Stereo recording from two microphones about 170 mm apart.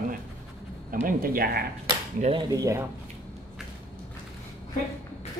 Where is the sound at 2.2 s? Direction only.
35° right (ahead or behind).